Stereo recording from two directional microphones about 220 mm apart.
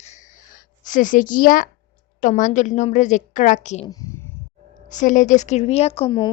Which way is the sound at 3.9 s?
15° left (ahead or behind).